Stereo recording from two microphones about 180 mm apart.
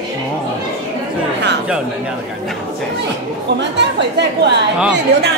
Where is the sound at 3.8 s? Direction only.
70° right (ahead or behind).